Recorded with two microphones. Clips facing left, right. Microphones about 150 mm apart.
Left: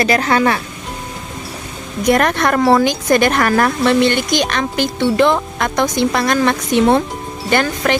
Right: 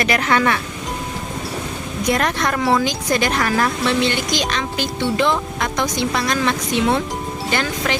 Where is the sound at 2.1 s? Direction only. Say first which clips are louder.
Left 6 dB; 60° left (ahead or behind).